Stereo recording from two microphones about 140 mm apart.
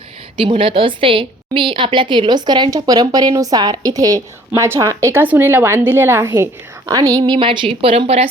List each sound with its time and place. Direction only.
0.3 s a woman's voice: 40° right (ahead or behind)